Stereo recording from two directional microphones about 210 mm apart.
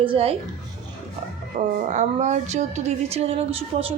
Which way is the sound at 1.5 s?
40° right (ahead or behind).